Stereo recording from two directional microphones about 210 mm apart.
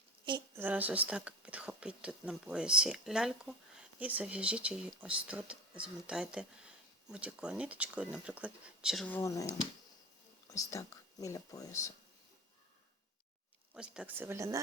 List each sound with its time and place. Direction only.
0.3 s a sound: 20° right (ahead or behind)
0.6 s speech: 10° right (ahead or behind); by 11.8 s 15° left (ahead or behind)
13.7 s speech: 5° right (ahead or behind)